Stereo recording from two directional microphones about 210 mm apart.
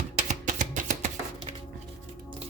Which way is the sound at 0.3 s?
35° right (ahead or behind).